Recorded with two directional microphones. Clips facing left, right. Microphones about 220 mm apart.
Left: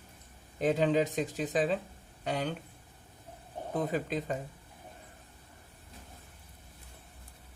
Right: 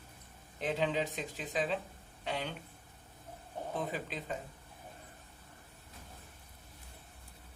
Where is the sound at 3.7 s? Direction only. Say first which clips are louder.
Left 8 dB; 45° left (ahead or behind).